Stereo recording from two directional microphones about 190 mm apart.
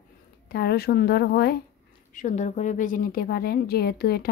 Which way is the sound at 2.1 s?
40° left (ahead or behind).